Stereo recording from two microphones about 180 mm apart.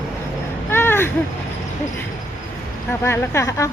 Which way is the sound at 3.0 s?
15° left (ahead or behind).